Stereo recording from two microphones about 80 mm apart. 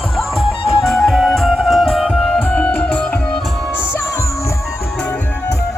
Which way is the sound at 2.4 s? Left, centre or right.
Centre.